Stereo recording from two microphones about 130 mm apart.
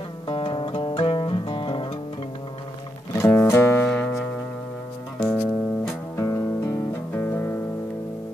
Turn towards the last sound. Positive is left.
turn(degrees=15)  # may be behind; listen again after turning